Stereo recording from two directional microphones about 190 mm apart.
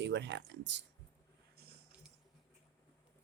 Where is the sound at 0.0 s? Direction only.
65° right (ahead or behind).